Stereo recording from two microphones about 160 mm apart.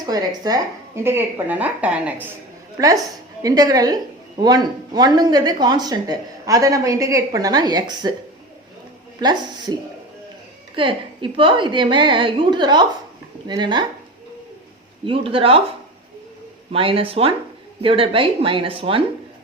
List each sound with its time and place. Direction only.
0.0 s a woman's voice: 25° right (ahead or behind); by 2.2 s 10° right (ahead or behind)
2.7 s a woman's voice: 20° right (ahead or behind)
9.2 s speech: 25° right (ahead or behind)
10.8 s a woman's voice: 30° right (ahead or behind)
15.0 s a woman's voice: 35° right (ahead or behind)
16.7 s a woman's voice: 35° right (ahead or behind)